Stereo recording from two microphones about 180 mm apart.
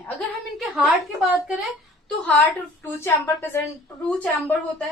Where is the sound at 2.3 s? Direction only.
10° left (ahead or behind).